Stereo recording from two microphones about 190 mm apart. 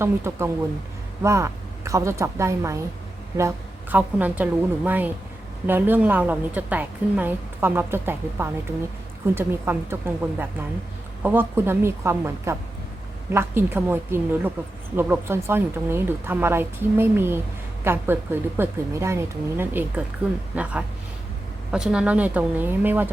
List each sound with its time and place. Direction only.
0.0 s a woman's voice: 15° right (ahead or behind)